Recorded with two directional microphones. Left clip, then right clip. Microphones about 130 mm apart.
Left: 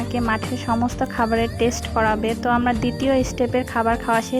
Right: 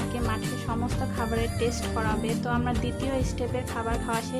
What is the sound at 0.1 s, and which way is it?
A woman's voice, 45° left (ahead or behind).